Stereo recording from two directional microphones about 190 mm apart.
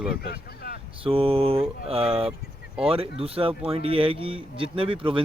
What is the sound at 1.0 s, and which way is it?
Speech, 30° right (ahead or behind).